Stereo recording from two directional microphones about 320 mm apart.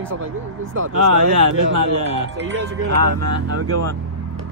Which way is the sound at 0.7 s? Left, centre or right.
Right.